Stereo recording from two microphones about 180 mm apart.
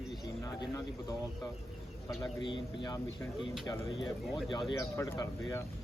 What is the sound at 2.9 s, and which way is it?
Speech, 20° left (ahead or behind).